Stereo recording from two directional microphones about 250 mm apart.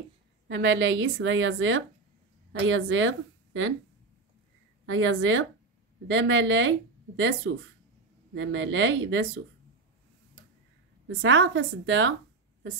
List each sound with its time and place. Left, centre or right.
0.5 s speech: right
4.8 s speech: right
11.1 s speech: right